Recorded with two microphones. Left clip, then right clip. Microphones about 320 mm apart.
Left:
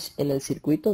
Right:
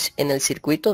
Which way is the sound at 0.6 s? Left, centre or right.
Right.